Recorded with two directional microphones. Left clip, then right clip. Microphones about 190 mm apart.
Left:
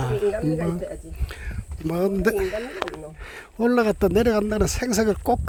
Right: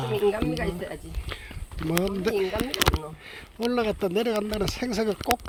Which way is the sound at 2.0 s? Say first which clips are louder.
Left 4 dB; 70° left (ahead or behind).